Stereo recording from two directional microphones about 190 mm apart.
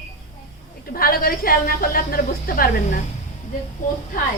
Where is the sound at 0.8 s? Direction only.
50° left (ahead or behind).